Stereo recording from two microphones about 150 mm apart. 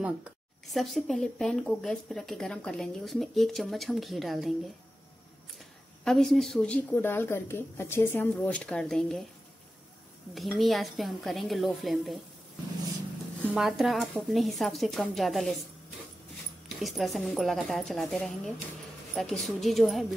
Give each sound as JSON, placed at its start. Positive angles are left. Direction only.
{"t": 0.0, "sound": "speech", "side_deg": -5}
{"t": 5.6, "sound": "speech", "side_deg": 0}
{"t": 10.3, "sound": "speech", "side_deg": 0}
{"t": 13.5, "sound": "speech", "side_deg": -5}
{"t": 16.6, "sound": "speech", "side_deg": 0}